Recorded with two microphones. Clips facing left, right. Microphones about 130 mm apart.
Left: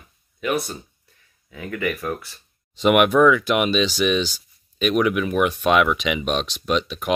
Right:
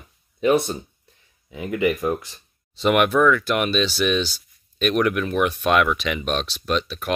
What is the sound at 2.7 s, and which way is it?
Speech, 10° left (ahead or behind).